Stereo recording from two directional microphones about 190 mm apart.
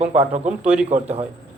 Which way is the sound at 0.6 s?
5° right (ahead or behind).